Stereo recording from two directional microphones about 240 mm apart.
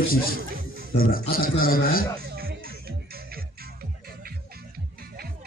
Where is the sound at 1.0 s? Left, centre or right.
Left.